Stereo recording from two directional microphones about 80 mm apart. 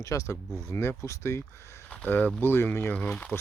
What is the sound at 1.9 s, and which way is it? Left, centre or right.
Speech, left.